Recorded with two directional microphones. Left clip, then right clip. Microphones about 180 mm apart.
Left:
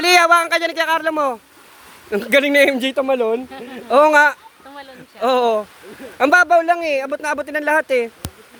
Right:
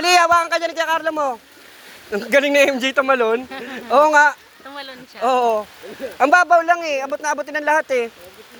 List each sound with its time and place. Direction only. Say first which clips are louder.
0.0 s speech: left 2 dB; 40° left (ahead or behind)
4.7 s speech: right 4 dB; 20° right (ahead or behind)
5.2 s speech: left 1 dB; 40° left (ahead or behind)